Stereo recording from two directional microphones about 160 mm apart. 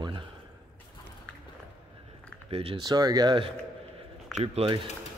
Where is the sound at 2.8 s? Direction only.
25° right (ahead or behind).